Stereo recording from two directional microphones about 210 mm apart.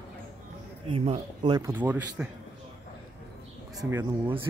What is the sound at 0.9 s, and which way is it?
Speech, 25° right (ahead or behind).